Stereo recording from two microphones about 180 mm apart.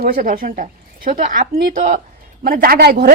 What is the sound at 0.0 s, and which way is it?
Speech, 50° right (ahead or behind).